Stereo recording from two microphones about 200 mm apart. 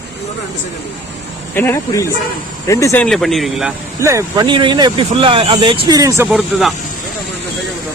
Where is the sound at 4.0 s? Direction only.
15° right (ahead or behind).